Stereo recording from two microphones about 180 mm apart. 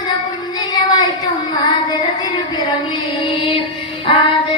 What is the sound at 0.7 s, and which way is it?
Child singing, 20° left (ahead or behind).